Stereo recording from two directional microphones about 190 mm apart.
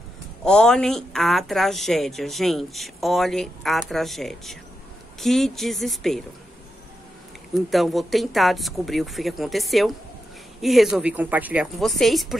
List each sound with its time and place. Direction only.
0.4 s speech: 5° left (ahead or behind)
7.5 s speech: centre (ahead or behind)